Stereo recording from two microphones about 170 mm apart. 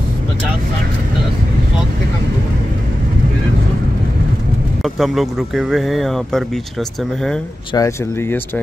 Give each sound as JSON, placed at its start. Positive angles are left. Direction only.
{"t": 4.8, "sound": "speech", "side_deg": 0}
{"t": 7.7, "sound": "speech", "side_deg": 15}